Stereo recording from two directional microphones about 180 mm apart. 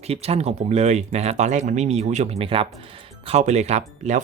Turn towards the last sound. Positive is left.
turn(degrees=-40)  # may be behind; listen again after turning